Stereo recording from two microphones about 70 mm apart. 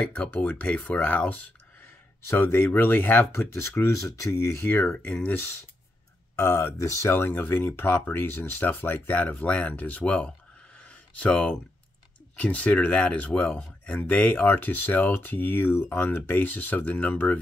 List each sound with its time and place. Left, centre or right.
0.1 s speech: centre
2.2 s speech: left
3.3 s speech: left
4.6 s speech: left
6.3 s speech: left; by 10.3 s centre
10.8 s a sound: centre
12.4 s speech: centre